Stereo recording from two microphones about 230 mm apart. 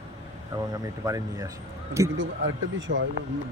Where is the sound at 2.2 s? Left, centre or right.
Right.